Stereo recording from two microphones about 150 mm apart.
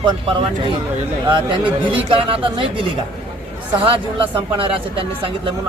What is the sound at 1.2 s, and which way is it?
Speech, 35° right (ahead or behind).